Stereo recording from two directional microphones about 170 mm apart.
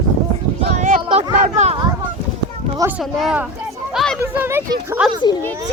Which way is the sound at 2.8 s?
10° right (ahead or behind).